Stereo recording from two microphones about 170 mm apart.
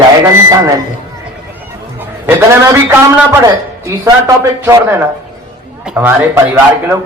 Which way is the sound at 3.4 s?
20° right (ahead or behind).